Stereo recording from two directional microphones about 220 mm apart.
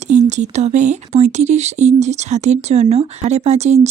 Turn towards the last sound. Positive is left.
turn(degrees=-30)  # may be behind; listen again after turning